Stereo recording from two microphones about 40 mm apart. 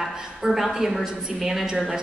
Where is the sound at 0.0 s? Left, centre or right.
Centre.